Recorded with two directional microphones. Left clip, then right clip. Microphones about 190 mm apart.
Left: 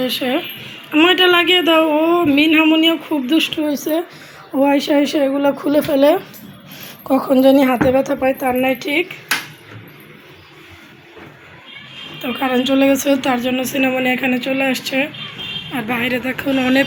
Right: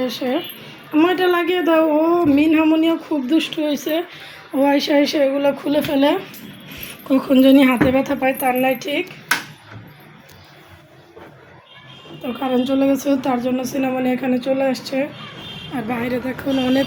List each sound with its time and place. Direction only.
0.0 s a woman's voice: centre (ahead or behind)
12.2 s speech: 5° left (ahead or behind)